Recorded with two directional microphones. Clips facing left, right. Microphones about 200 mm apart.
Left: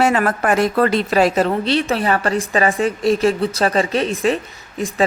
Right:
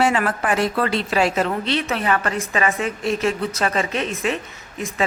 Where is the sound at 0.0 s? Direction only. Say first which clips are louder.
Left 3 dB; 40° left (ahead or behind).